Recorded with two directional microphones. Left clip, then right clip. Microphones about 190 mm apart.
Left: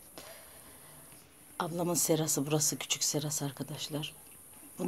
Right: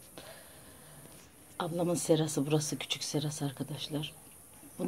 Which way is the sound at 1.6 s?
Centre (ahead or behind).